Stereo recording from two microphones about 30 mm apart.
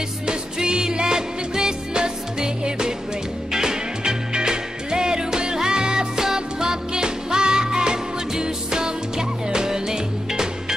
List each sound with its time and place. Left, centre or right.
0.3 s music: right